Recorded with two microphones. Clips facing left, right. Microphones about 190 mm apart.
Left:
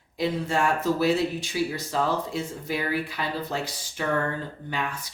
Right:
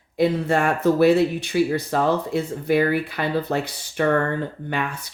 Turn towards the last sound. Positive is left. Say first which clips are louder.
# right 6 dB
turn(degrees=-60)  # may be behind; listen again after turning